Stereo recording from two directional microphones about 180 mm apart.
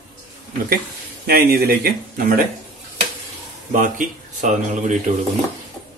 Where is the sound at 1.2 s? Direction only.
60° right (ahead or behind).